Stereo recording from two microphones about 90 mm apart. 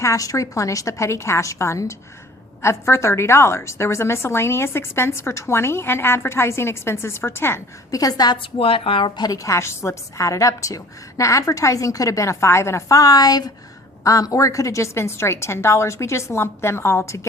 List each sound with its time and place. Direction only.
0.0 s a woman's voice: 35° left (ahead or behind)
7.9 s a woman's voice: 40° left (ahead or behind)
8.4 s a woman's voice: 90° left; by 17.2 s 30° left (ahead or behind)